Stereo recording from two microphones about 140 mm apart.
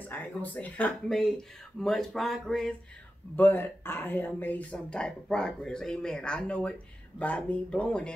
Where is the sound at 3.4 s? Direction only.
15° left (ahead or behind).